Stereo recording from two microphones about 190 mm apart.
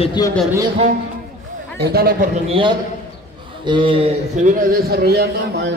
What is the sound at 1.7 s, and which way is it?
Speech, 55° right (ahead or behind).